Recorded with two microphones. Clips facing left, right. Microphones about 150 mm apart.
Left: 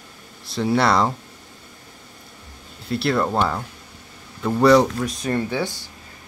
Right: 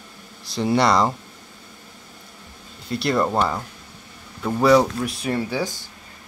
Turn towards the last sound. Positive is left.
turn(degrees=-10)  # may be behind; listen again after turning